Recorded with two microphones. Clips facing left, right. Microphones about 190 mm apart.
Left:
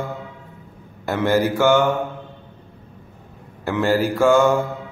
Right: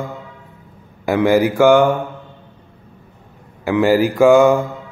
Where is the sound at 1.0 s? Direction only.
10° right (ahead or behind).